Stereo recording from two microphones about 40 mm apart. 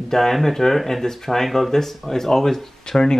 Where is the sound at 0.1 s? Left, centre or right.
Centre.